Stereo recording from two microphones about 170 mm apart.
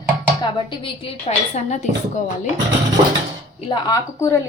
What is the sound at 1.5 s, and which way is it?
Speech, 45° left (ahead or behind).